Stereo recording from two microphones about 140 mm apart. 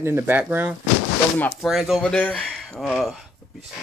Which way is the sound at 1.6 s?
5° right (ahead or behind).